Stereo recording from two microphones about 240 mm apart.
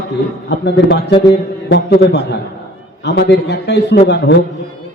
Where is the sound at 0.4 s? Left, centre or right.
Left.